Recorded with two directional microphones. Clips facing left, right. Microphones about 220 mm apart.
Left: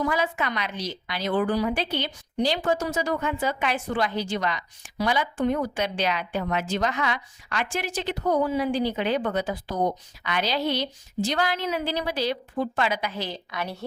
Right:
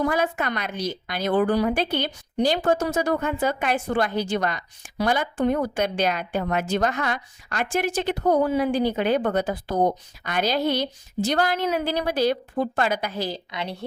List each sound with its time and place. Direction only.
0.0 s a woman's voice: 50° right (ahead or behind)